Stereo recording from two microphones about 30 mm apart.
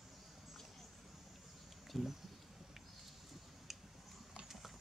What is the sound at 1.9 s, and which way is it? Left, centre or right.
Speech, centre.